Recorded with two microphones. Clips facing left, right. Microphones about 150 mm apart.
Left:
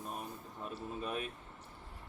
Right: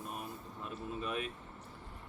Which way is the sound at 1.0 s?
40° left (ahead or behind).